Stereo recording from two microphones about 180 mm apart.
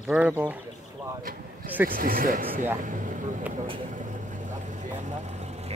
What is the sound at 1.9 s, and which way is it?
Speech, 50° right (ahead or behind).